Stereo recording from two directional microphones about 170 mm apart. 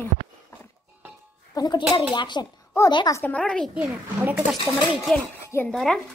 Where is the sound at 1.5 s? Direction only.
25° left (ahead or behind); by 3.7 s 5° left (ahead or behind).